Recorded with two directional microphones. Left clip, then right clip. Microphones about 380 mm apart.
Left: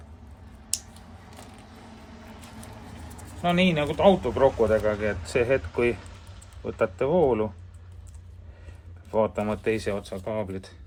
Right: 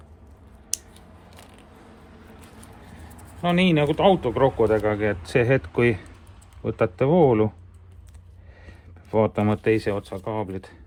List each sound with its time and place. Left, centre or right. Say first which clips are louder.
3.4 s speech: right 3 dB; centre
9.1 s speech: right 3 dB; centre